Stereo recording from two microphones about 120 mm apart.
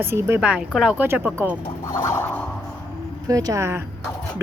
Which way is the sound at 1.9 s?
25° left (ahead or behind).